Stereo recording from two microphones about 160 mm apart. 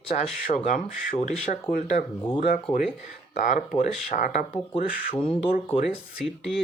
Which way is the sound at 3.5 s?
50° left (ahead or behind).